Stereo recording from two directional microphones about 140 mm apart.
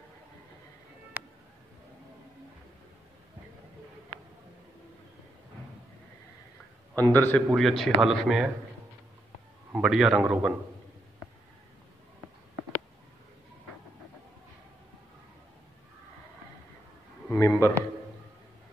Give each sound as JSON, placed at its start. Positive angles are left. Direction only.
{"t": 1.1, "sound": "a sound", "side_deg": -15}
{"t": 7.0, "sound": "a man's voice", "side_deg": 15}
{"t": 7.4, "sound": "speech", "side_deg": 0}
{"t": 9.7, "sound": "speech", "side_deg": -5}
{"t": 17.3, "sound": "a man's voice", "side_deg": 15}